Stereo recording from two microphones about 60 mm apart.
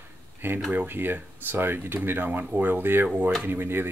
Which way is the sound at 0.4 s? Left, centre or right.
Right.